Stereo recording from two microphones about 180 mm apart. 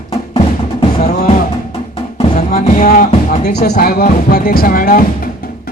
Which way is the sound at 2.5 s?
55° left (ahead or behind).